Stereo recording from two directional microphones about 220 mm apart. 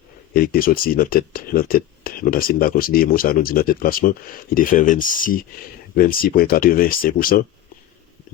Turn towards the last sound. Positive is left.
turn(degrees=40)  # may be behind; listen again after turning